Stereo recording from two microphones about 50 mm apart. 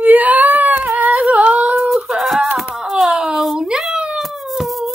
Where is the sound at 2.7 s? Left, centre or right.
Centre.